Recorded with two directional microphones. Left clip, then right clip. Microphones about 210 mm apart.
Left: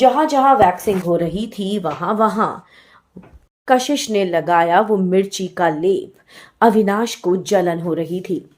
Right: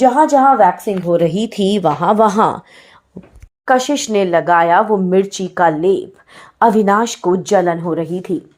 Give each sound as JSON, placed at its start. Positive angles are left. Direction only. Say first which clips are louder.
{"t": 0.0, "sound": "a woman's voice", "louder": "right 3 dB", "side_deg": -45}
{"t": 3.7, "sound": "speech", "louder": "right 2 dB", "side_deg": -5}